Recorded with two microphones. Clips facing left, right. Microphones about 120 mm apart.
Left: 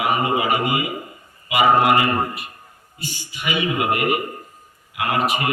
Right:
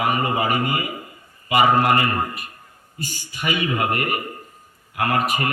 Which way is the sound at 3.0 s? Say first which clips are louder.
Right 2 dB; 45° right (ahead or behind).